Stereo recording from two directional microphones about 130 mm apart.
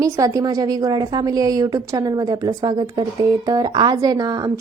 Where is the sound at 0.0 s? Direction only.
25° right (ahead or behind).